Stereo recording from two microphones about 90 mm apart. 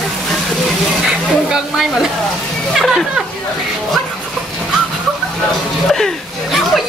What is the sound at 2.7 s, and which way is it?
Speech, centre (ahead or behind).